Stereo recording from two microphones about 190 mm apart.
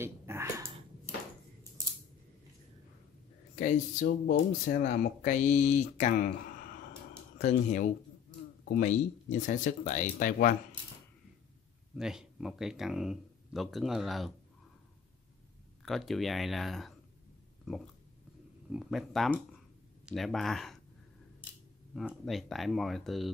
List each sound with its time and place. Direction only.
0.0 s a sound: 10° right (ahead or behind)
3.5 s speech: 45° left (ahead or behind)
7.3 s speech: 40° left (ahead or behind)
11.9 s speech: 5° right (ahead or behind)
15.8 s speech: centre (ahead or behind)
18.7 s speech: centre (ahead or behind)
21.9 s speech: centre (ahead or behind)